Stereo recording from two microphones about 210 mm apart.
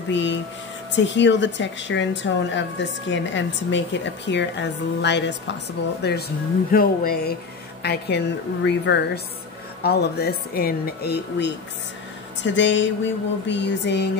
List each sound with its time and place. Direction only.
0.1 s a woman's voice: 60° left (ahead or behind)